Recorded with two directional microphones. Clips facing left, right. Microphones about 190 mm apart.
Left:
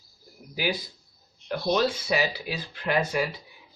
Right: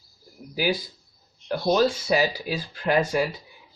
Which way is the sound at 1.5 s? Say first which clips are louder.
Right 3 dB; 40° right (ahead or behind).